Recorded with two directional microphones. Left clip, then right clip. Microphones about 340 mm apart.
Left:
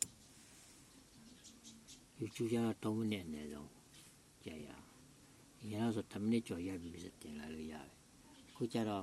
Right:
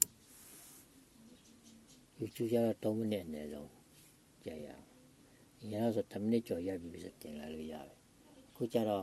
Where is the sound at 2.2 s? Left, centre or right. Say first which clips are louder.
Right 5 dB; centre.